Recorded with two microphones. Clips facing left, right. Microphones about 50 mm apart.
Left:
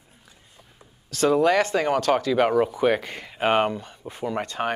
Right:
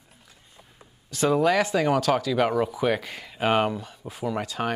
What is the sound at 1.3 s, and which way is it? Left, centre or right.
Speech, centre.